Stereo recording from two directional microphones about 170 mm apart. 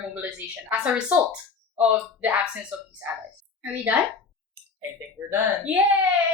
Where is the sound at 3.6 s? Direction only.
10° right (ahead or behind).